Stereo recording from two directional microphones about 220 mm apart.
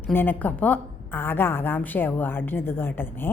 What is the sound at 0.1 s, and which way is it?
A woman's voice, 10° left (ahead or behind).